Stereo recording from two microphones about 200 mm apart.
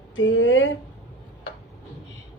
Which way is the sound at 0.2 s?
75° left (ahead or behind).